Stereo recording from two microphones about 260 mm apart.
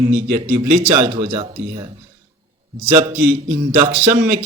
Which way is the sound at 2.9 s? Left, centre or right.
Right.